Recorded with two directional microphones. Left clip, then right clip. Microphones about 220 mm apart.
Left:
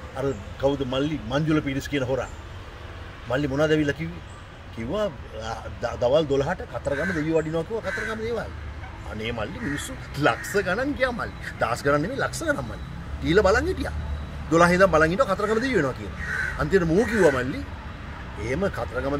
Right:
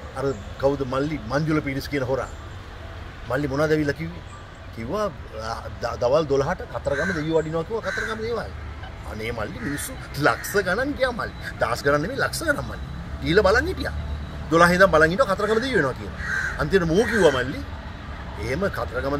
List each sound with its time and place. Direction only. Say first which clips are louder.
0.7 s speech: right 1 dB; centre (ahead or behind)
3.3 s speech: even; centre (ahead or behind)